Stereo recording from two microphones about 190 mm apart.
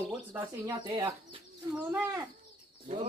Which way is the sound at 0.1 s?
10° right (ahead or behind).